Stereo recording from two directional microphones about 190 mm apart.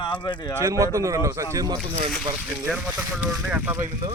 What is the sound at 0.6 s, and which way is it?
Speech, 15° right (ahead or behind).